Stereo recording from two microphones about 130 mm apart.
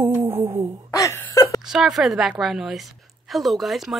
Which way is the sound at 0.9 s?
25° left (ahead or behind).